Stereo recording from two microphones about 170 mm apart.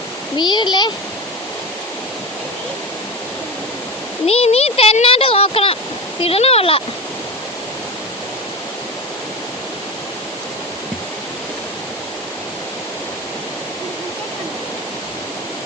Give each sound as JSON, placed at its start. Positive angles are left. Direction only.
{"t": 0.3, "sound": "a child's voice", "side_deg": 25}
{"t": 4.3, "sound": "speech", "side_deg": 35}